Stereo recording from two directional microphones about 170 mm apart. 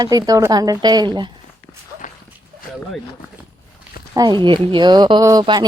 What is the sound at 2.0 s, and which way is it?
Dog, 50° left (ahead or behind).